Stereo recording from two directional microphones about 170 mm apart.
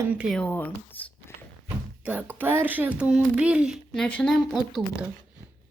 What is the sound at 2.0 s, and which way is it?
Speech, 10° right (ahead or behind).